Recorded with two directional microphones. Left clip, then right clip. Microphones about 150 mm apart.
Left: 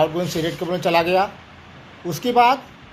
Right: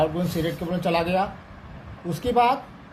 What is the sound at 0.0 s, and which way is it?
Speech, 35° left (ahead or behind).